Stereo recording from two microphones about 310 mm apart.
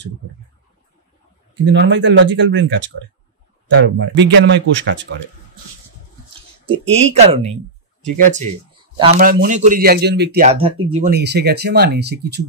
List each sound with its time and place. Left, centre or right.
1.5 s speech: right
6.6 s speech: centre